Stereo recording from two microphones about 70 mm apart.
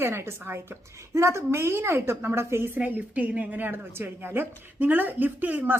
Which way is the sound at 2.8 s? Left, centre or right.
Right.